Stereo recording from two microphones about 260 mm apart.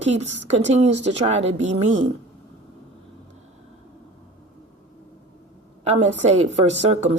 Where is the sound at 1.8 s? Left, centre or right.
Right.